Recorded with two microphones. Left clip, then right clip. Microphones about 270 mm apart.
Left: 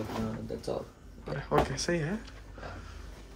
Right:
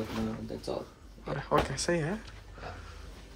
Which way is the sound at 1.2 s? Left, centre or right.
Centre.